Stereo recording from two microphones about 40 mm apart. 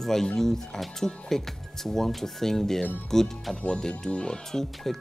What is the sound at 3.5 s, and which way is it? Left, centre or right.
Speech, left.